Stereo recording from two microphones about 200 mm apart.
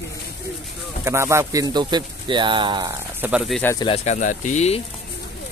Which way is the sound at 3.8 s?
30° left (ahead or behind).